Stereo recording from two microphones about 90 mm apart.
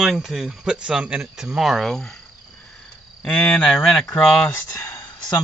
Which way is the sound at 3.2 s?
15° left (ahead or behind).